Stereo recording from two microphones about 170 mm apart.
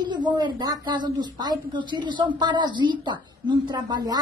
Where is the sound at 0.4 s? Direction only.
25° right (ahead or behind).